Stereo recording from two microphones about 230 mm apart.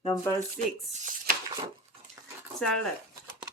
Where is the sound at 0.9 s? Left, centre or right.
Right.